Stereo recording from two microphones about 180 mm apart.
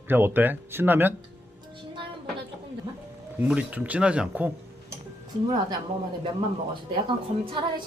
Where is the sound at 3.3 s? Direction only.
10° right (ahead or behind).